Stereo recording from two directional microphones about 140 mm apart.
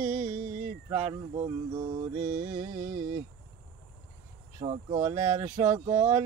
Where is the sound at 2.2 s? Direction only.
70° right (ahead or behind).